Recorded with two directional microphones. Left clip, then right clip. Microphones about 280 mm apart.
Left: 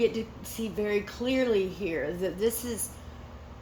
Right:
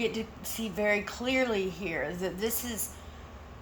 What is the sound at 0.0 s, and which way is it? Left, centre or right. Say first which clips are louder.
Speech: left 5 dB; centre.